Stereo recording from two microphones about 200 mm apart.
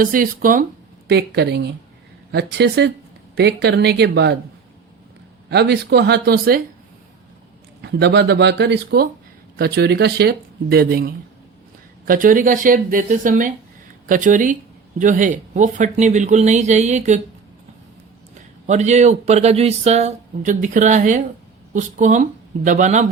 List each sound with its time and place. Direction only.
0.0 s speech: 45° right (ahead or behind)
1.0 s speech: 60° right (ahead or behind)
5.5 s speech: 55° right (ahead or behind)
7.8 s speech: 60° right (ahead or behind); by 17.2 s 35° right (ahead or behind)
18.6 s speech: 35° right (ahead or behind)